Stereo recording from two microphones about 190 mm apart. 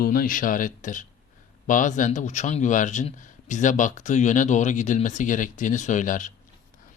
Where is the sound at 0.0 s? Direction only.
50° left (ahead or behind).